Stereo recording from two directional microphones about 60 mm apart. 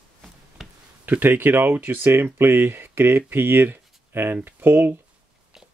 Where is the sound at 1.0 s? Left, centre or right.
Right.